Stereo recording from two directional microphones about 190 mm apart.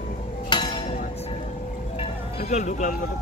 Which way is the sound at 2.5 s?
40° left (ahead or behind).